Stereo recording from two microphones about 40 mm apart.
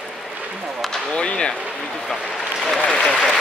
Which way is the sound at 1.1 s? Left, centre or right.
Left.